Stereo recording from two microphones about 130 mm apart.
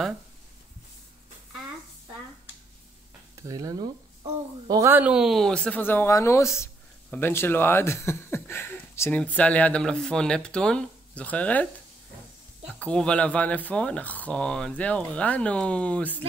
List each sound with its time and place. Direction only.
3.3 s speech: 25° right (ahead or behind)
4.9 s speech: 10° right (ahead or behind); by 11.6 s 10° left (ahead or behind)
12.7 s speech: 10° left (ahead or behind)